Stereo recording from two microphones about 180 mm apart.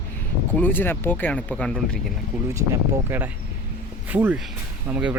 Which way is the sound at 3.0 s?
10° right (ahead or behind).